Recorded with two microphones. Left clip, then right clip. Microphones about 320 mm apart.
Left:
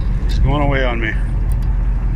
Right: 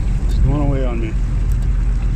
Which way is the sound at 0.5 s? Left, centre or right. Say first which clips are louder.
Left 5 dB; left.